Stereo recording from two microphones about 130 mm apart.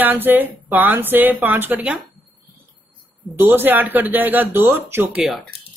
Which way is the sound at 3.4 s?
15° right (ahead or behind).